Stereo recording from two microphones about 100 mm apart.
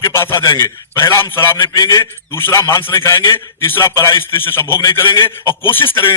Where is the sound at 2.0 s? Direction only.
30° left (ahead or behind).